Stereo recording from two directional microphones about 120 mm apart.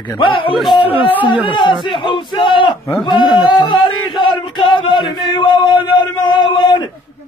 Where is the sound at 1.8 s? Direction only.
45° left (ahead or behind).